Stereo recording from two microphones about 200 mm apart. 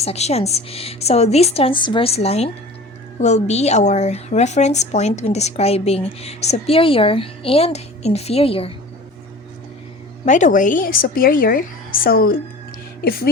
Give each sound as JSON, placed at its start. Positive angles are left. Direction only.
{"t": 0.0, "sound": "a woman's voice", "side_deg": 30}
{"t": 10.2, "sound": "a woman's voice", "side_deg": 40}